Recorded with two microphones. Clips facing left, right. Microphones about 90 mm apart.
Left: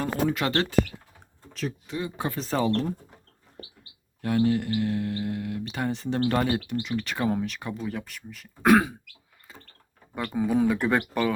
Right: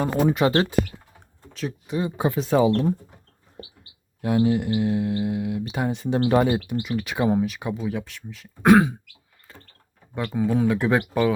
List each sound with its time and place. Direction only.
0.0 s speech: 20° right (ahead or behind)
1.9 s speech: 20° right (ahead or behind)
4.2 s speech: 15° right (ahead or behind)
10.2 s speech: centre (ahead or behind)